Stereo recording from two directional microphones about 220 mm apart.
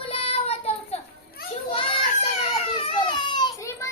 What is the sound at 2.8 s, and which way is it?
Baby cry, 20° left (ahead or behind).